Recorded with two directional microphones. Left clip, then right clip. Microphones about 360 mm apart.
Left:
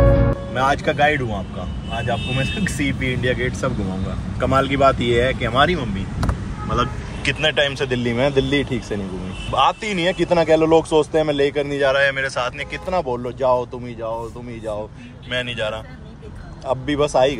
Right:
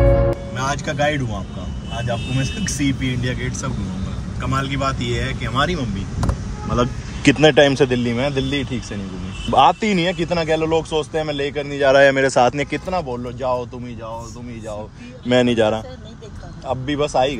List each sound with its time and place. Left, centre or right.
0.6 s speech: centre
15.3 s a man's voice: centre
16.8 s speech: centre